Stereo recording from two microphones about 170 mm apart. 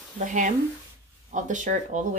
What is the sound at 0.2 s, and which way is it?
A woman's voice, 45° right (ahead or behind).